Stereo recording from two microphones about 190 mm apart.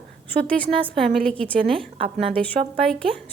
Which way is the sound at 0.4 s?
5° left (ahead or behind).